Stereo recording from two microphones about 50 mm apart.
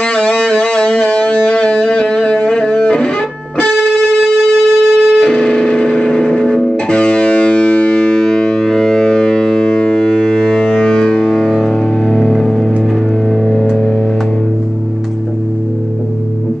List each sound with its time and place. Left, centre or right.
0.0 s music: centre
8.0 s music: centre